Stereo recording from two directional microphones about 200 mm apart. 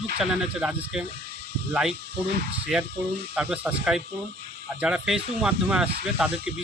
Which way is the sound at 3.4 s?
5° right (ahead or behind).